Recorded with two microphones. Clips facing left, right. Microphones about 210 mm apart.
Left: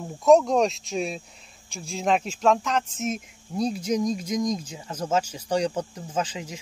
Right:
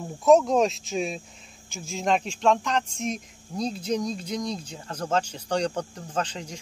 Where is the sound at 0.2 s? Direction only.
Centre (ahead or behind).